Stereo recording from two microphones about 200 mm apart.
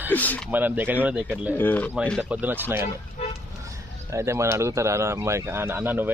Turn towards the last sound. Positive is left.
turn(degrees=-10)  # may be behind; listen again after turning